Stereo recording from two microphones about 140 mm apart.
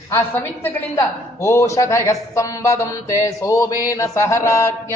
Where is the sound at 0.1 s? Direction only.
15° left (ahead or behind).